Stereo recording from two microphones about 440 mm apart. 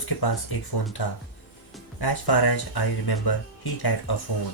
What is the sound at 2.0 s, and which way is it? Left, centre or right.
Speech, left.